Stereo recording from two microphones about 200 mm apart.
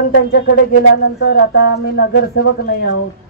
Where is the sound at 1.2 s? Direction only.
55° left (ahead or behind).